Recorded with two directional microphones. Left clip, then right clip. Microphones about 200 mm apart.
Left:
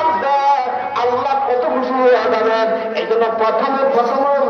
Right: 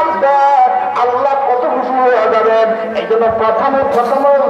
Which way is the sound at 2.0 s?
35° right (ahead or behind).